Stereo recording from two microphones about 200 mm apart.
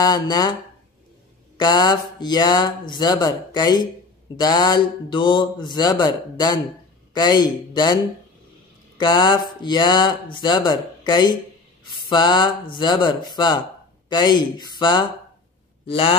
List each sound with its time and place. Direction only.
0.0 s speech: 20° left (ahead or behind)
1.6 s speech: 20° left (ahead or behind)